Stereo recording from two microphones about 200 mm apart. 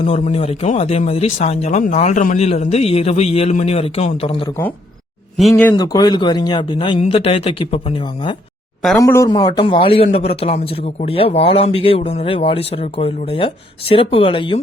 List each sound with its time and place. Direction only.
0.0 s a man's voice: 30° left (ahead or behind)
5.4 s speech: 5° left (ahead or behind)
5.7 s a man's voice: 20° left (ahead or behind)